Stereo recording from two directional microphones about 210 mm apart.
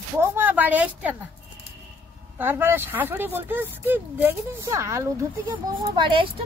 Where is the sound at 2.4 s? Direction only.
10° right (ahead or behind).